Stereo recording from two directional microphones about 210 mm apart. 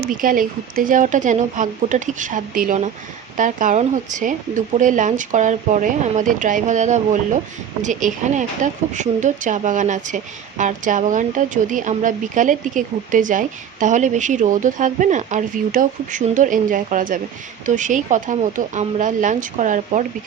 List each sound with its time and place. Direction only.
0.2 s a woman's voice: 40° right (ahead or behind)